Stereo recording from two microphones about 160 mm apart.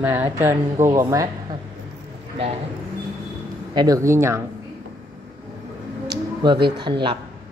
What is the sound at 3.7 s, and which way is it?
Speech, 20° right (ahead or behind).